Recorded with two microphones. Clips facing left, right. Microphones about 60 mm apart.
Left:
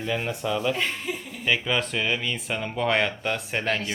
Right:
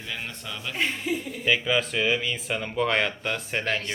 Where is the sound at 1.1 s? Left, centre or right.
Centre.